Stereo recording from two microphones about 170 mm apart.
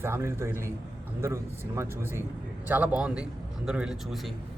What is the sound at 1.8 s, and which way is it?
A man's voice, 15° right (ahead or behind).